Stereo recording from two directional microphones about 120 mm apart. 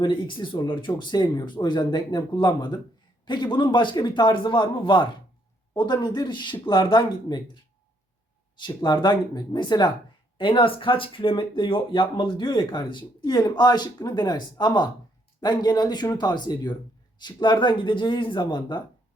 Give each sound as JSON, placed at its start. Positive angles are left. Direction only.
{"t": 0.0, "sound": "speech", "side_deg": 45}